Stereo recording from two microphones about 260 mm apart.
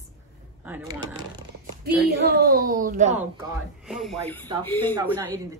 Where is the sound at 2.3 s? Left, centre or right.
Right.